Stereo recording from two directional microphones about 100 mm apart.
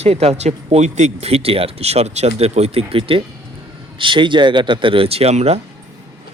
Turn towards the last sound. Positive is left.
turn(degrees=-90)